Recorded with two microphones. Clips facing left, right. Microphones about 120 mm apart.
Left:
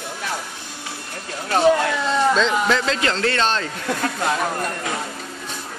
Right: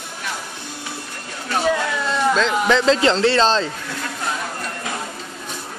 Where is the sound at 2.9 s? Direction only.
30° right (ahead or behind).